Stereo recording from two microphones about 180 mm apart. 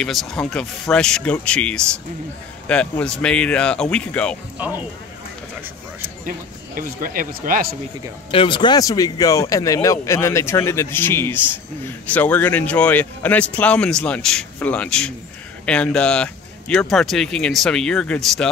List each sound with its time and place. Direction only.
0.0 s speech: centre (ahead or behind)
4.6 s speech: 10° right (ahead or behind)
6.2 s speech: 50° right (ahead or behind)
8.3 s speech: 30° left (ahead or behind); by 18.5 s 5° left (ahead or behind)